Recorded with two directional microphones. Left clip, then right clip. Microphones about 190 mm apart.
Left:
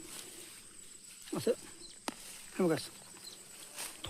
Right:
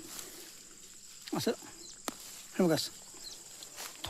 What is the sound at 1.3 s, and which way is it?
Speech, 45° right (ahead or behind).